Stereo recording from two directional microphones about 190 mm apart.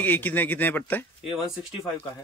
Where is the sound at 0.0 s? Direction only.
10° left (ahead or behind).